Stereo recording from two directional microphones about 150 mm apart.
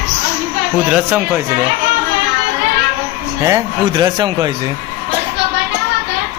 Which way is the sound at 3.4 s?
25° right (ahead or behind).